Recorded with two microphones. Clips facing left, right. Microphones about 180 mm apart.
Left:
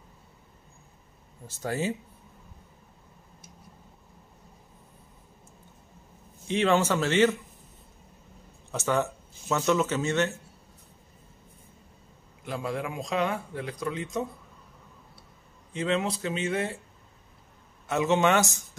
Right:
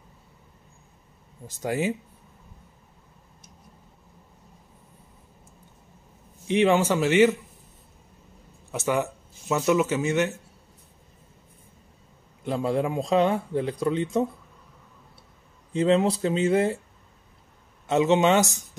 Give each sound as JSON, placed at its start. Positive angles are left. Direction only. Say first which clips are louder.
{"t": 1.5, "sound": "speech", "louder": "right 3 dB", "side_deg": -15}
{"t": 6.4, "sound": "speech", "louder": "right 3 dB", "side_deg": -15}
{"t": 8.7, "sound": "speech", "louder": "right 1 dB", "side_deg": -10}
{"t": 12.4, "sound": "a man's voice", "louder": "right 7 dB", "side_deg": -30}
{"t": 15.7, "sound": "speech", "louder": "right 7 dB", "side_deg": -30}
{"t": 17.8, "sound": "speech", "louder": "right 4 dB", "side_deg": -20}